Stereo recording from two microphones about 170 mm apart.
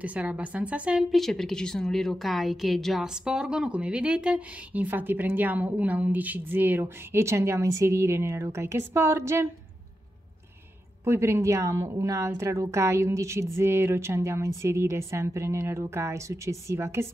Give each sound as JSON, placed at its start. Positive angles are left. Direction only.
{"t": 0.0, "sound": "a woman's voice", "side_deg": -5}
{"t": 11.1, "sound": "a woman's voice", "side_deg": -15}